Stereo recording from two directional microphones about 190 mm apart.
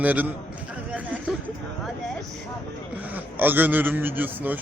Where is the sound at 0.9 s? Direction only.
5° right (ahead or behind).